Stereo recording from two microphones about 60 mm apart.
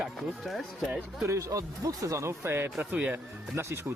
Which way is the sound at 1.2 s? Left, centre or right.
Right.